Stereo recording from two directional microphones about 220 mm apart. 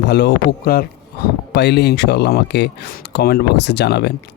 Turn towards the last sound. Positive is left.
turn(degrees=50)  # may be behind; listen again after turning